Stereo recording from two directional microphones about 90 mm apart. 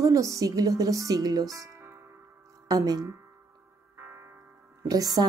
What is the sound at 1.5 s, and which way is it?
Music, 40° right (ahead or behind).